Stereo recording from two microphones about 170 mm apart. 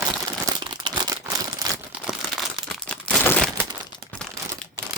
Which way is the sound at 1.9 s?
5° right (ahead or behind).